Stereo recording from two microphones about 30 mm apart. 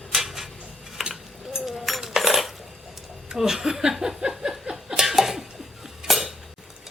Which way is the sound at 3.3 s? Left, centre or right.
Centre.